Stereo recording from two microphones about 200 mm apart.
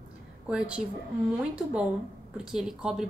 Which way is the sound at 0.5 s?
5° right (ahead or behind).